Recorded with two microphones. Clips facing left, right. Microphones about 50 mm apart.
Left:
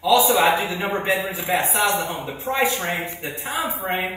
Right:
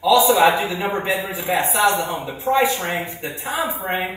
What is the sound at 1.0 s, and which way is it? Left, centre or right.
Speech, left.